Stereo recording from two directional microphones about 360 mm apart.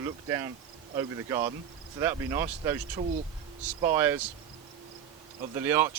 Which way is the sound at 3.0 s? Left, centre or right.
Centre.